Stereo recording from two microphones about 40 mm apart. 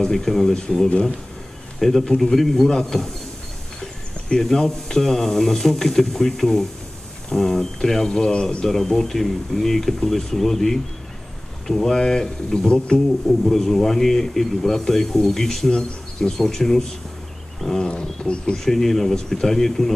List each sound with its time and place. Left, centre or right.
0.0 s speech: centre
1.8 s speech: centre; by 8.6 s left
8.6 s speech: centre
13.3 s speech: centre
17.7 s wild animals: left
18.2 s speech: centre